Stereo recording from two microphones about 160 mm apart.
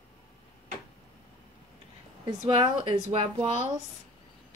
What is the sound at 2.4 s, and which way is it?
A woman's voice, 35° right (ahead or behind).